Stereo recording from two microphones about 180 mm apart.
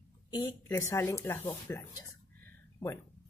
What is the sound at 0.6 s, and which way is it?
Speech, 15° left (ahead or behind).